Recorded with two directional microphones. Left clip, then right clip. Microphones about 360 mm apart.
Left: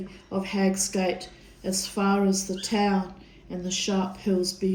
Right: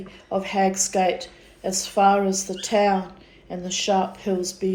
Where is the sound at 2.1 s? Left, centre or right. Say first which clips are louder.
Right 3 dB; right.